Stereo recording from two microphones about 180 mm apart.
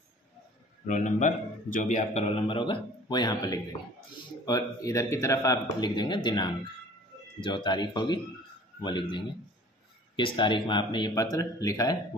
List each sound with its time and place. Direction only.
0.8 s a man's voice: 45° left (ahead or behind); by 12.0 s 20° left (ahead or behind)